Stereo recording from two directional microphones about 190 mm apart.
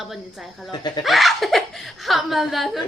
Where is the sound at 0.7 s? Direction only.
20° left (ahead or behind).